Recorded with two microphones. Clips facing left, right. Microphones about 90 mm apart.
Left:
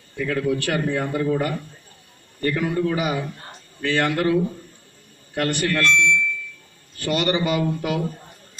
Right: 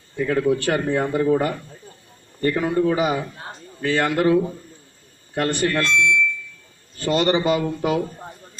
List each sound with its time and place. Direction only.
0.1 s speech: 20° right (ahead or behind)